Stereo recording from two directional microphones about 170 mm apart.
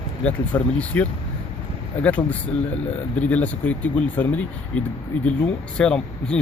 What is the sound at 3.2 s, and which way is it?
Speech, 10° left (ahead or behind).